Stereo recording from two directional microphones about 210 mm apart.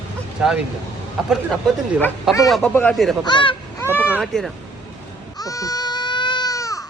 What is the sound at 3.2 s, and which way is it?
Honk, 20° left (ahead or behind).